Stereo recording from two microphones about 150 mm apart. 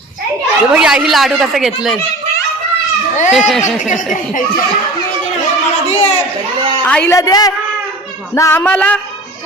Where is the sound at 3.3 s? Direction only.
Centre (ahead or behind).